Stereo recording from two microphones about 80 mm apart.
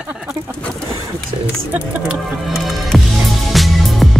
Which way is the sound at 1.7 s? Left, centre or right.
Centre.